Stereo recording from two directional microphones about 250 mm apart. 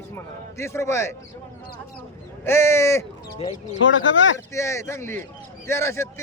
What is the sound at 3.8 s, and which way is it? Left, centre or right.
Speech, left.